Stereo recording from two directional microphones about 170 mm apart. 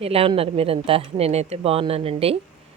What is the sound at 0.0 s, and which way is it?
Speech, 35° right (ahead or behind).